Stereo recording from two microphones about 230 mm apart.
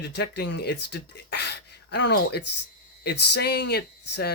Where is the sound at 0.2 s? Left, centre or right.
Left.